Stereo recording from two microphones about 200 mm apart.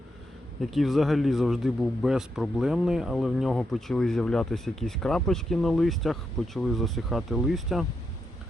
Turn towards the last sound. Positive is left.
turn(degrees=0)  # may be behind; listen again after turning